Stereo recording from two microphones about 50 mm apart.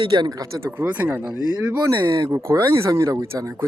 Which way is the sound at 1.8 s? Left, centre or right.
Right.